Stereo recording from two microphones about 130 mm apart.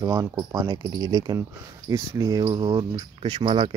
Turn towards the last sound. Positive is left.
turn(degrees=-45)  # may be behind; listen again after turning